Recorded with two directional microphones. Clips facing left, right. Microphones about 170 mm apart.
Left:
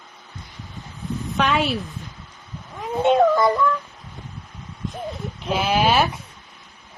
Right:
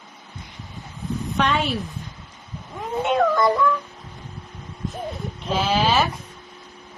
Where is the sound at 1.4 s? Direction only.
Centre (ahead or behind).